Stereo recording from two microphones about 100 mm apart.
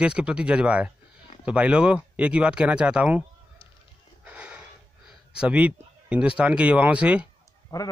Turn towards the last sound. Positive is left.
turn(degrees=35)  # may be behind; listen again after turning